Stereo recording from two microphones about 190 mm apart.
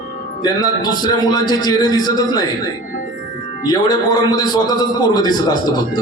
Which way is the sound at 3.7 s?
20° left (ahead or behind).